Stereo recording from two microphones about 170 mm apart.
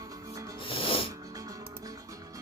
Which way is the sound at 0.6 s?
30° left (ahead or behind).